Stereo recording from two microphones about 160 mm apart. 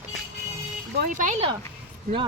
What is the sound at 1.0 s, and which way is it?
Speech, 50° right (ahead or behind).